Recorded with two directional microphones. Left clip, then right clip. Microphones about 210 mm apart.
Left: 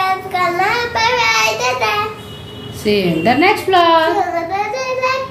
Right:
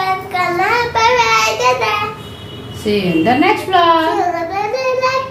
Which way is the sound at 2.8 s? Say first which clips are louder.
Even; 40° left (ahead or behind).